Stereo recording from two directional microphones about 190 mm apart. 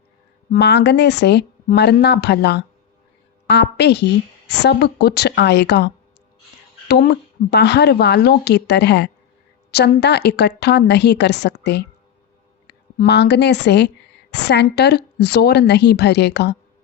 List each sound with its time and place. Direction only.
0.5 s speech: 65° left (ahead or behind)